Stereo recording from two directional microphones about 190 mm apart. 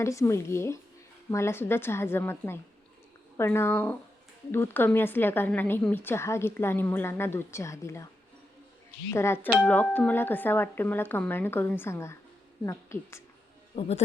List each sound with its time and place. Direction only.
0.0 s a woman's voice: 15° left (ahead or behind)
9.0 s a woman's voice: 15° left (ahead or behind)
13.7 s a man's voice: 35° left (ahead or behind)